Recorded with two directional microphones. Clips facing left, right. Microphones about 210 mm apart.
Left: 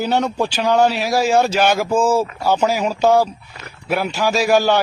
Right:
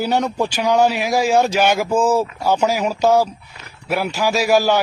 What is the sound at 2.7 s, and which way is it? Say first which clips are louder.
Speech: left 1 dB; 10° right (ahead or behind).